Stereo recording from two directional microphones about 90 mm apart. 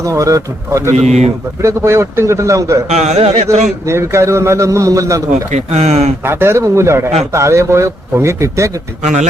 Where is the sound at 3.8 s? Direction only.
30° right (ahead or behind).